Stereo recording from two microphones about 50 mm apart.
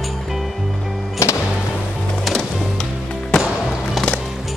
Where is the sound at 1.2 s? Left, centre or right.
Left.